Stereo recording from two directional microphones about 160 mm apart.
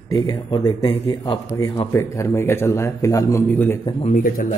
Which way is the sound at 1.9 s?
15° left (ahead or behind).